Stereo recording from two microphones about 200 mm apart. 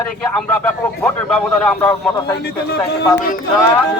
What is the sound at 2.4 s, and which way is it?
Speech, 55° left (ahead or behind).